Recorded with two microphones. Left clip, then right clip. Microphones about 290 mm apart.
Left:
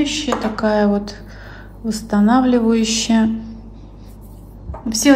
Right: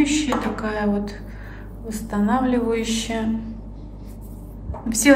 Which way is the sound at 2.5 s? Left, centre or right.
Centre.